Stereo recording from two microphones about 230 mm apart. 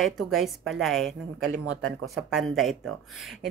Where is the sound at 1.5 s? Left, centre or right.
Right.